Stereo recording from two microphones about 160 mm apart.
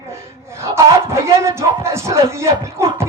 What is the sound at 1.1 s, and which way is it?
Music, 15° right (ahead or behind).